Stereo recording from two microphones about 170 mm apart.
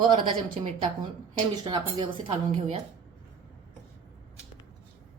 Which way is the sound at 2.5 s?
45° right (ahead or behind).